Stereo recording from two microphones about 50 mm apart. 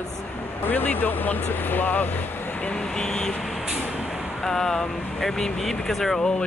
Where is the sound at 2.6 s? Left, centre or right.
Left.